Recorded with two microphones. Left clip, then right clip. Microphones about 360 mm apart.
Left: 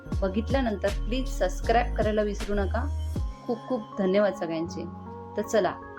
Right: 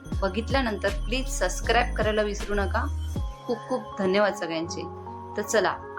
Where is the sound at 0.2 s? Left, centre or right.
Left.